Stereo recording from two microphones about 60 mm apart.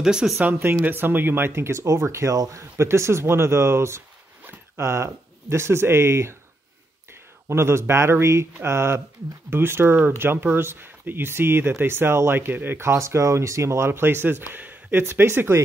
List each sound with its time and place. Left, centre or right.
0.0 s speech: centre
0.4 s speech: right
2.3 s speech: right
2.8 s speech: right
7.4 s speech: right
12.8 s speech: right